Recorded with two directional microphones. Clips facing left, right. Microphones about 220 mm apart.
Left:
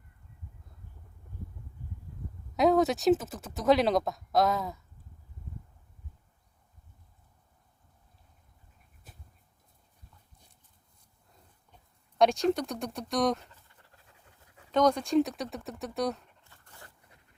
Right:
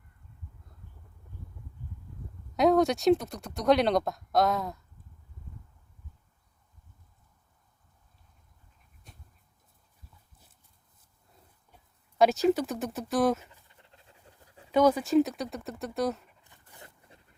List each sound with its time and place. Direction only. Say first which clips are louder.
2.6 s speech: right 1 dB; centre (ahead or behind)
9.1 s dog: even; 5° left (ahead or behind)
11.4 s a sound: even; 5° right (ahead or behind)
13.7 s dog: right 3 dB; 20° right (ahead or behind)
14.7 s speech: right 2 dB; 5° right (ahead or behind)
16.4 s zipper: right 2 dB; 15° right (ahead or behind)